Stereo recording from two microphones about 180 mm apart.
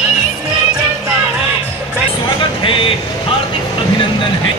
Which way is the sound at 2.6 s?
30° left (ahead or behind).